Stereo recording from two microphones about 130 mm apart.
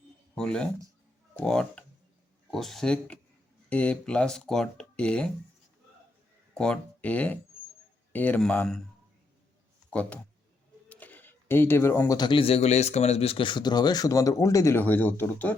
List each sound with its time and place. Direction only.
0.3 s speech: 5° left (ahead or behind)
6.5 s speech: 5° left (ahead or behind)
9.9 s speech: 10° left (ahead or behind)